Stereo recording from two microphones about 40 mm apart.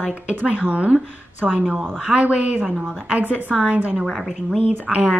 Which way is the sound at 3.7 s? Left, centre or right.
Right.